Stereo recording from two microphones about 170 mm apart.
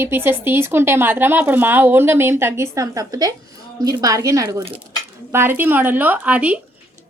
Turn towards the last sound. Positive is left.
turn(degrees=-10)  # may be behind; listen again after turning